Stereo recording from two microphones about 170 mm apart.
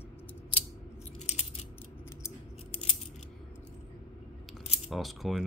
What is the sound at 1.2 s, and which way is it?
Coin, 40° left (ahead or behind).